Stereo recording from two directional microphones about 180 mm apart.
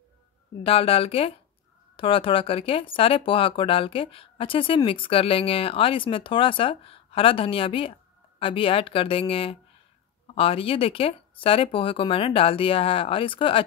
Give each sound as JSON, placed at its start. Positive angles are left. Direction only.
{"t": 0.7, "sound": "speech", "side_deg": 30}